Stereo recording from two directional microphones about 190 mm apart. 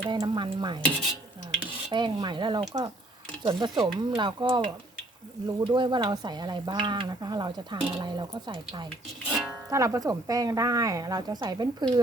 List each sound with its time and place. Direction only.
0.1 s speech: 25° right (ahead or behind)
1.9 s speech: 25° right (ahead or behind)
9.2 s music: 5° right (ahead or behind)
9.6 s speech: 15° right (ahead or behind)